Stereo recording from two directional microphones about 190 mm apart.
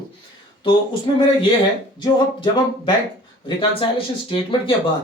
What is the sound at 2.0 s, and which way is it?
Speech, 25° left (ahead or behind).